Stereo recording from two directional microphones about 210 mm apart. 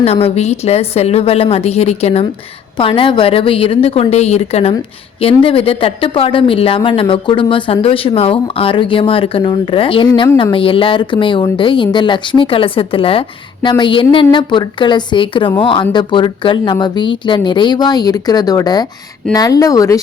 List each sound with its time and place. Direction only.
0.0 s speech: 30° left (ahead or behind)